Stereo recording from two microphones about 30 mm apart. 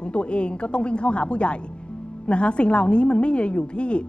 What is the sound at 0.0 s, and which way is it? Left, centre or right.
A woman's voice, left.